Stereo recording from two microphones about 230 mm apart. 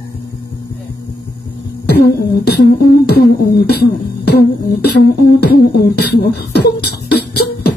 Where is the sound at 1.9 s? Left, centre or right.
Left.